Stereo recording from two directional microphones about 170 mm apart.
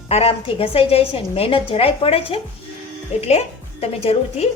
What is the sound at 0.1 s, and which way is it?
A woman's voice, 35° left (ahead or behind).